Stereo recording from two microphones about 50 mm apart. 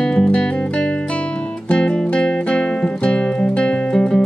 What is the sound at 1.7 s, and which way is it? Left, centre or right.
Music, centre.